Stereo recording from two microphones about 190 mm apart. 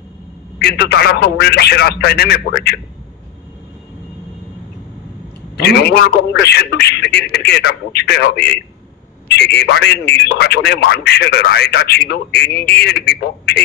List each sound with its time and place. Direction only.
0.6 s a man's voice: 60° left (ahead or behind)
5.6 s a man's voice: 60° left (ahead or behind)